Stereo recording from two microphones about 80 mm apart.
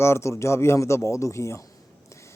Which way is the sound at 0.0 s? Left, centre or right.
Left.